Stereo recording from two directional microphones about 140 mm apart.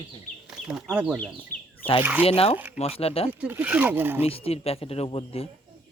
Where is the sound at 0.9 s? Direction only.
10° right (ahead or behind).